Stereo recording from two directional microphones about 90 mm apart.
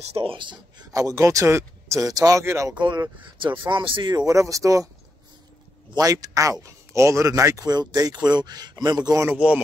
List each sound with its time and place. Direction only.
0.2 s speech: 70° right (ahead or behind)
0.9 s speech: 40° right (ahead or behind)
2.7 s speech: 60° right (ahead or behind)
4.3 s speech: 35° right (ahead or behind)
5.9 s speech: 40° right (ahead or behind)
9.3 s speech: 15° right (ahead or behind)